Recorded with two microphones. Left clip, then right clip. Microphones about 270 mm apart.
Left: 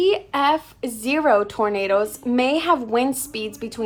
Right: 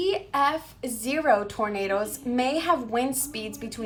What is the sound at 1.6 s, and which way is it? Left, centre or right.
A woman's voice, centre.